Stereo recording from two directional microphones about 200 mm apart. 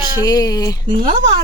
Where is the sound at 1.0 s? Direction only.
35° right (ahead or behind).